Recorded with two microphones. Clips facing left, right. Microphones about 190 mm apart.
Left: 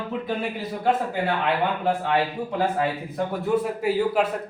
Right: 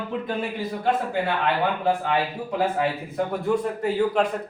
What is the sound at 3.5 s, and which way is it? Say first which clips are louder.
Speech: left 2 dB; centre (ahead or behind).